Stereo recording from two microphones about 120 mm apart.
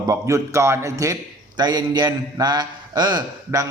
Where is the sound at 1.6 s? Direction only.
35° right (ahead or behind).